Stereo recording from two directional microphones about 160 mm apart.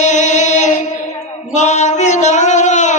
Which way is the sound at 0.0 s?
50° left (ahead or behind).